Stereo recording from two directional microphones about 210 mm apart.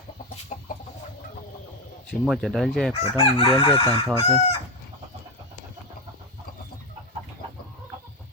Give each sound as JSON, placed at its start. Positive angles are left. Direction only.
{"t": 0.5, "sound": "chicken", "side_deg": 40}
{"t": 2.2, "sound": "speech", "side_deg": 0}
{"t": 3.0, "sound": "chicken", "side_deg": 25}